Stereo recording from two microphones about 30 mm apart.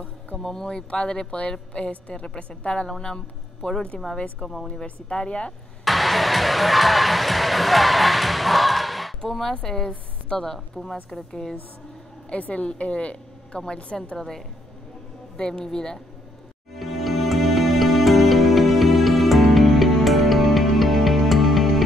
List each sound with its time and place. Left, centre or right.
0.4 s speech: centre
1.7 s a woman's voice: left
2.2 s a woman's voice: left
5.9 s music: centre
9.5 s a woman's voice: left
12.4 s a woman's voice: left
12.6 s a woman's voice: left
14.1 s a woman's voice: centre
16.7 s music: centre